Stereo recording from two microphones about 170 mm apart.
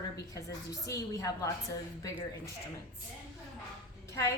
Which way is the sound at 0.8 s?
20° left (ahead or behind).